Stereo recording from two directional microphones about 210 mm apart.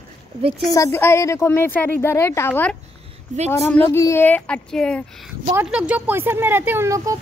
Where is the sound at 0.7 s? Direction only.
15° left (ahead or behind); by 7.2 s 15° right (ahead or behind).